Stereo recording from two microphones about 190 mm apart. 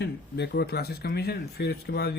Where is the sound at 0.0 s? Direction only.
60° left (ahead or behind).